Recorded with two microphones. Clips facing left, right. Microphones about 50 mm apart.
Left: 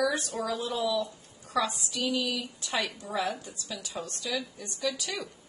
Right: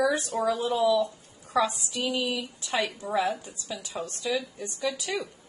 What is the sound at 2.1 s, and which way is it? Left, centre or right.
Speech, right.